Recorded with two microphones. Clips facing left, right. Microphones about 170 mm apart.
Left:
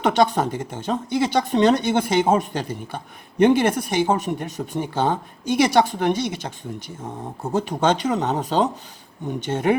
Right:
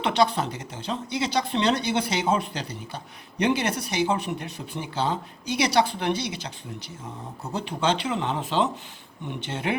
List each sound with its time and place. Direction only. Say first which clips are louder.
0.0 s speech: left 4 dB; 45° left (ahead or behind)